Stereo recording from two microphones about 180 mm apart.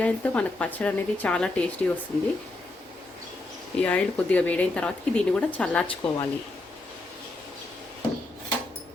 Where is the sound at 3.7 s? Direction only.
5° left (ahead or behind).